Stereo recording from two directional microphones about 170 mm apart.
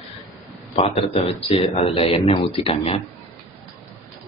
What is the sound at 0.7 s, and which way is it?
Speech, 35° left (ahead or behind).